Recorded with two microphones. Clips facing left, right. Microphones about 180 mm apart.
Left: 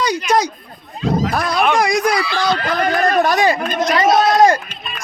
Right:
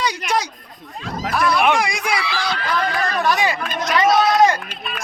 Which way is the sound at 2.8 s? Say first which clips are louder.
Left 9 dB; 80° left.